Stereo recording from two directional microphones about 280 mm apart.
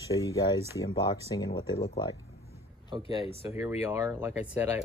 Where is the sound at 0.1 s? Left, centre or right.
Centre.